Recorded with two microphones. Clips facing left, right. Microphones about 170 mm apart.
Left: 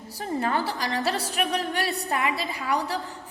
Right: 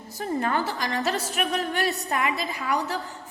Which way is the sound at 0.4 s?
35° left (ahead or behind).